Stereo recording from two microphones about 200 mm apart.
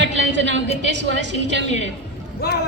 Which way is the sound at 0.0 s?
60° right (ahead or behind).